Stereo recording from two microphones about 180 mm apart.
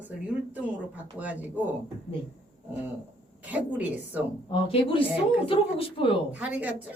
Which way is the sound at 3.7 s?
10° right (ahead or behind).